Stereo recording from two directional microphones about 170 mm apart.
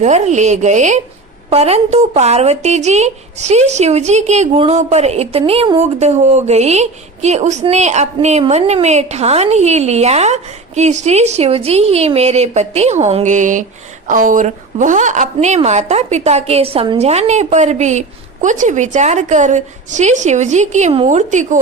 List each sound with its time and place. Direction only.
0.0 s a woman's voice: 45° right (ahead or behind)